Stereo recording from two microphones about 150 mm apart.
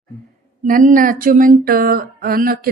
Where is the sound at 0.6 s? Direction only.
60° right (ahead or behind).